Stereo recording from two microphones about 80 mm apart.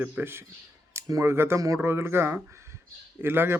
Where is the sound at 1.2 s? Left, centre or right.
Right.